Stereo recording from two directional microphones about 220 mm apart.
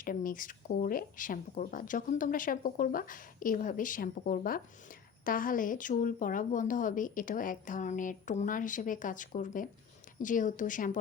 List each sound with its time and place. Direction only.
0.0 s speech: 40° left (ahead or behind)